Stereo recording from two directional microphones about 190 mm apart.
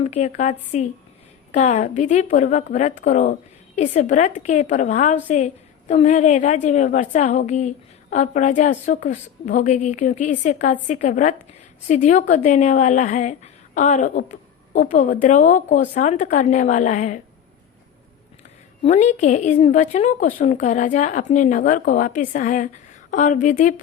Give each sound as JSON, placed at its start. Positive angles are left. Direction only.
{"t": 0.0, "sound": "speech", "side_deg": 35}
{"t": 18.8, "sound": "speech", "side_deg": 35}